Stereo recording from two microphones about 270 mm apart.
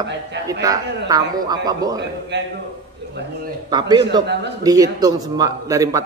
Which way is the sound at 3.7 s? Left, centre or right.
Centre.